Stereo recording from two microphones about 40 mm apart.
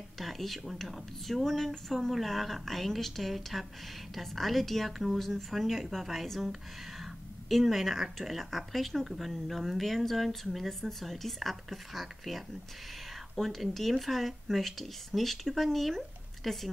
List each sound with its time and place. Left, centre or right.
0.2 s speech: centre
4.9 s speech: centre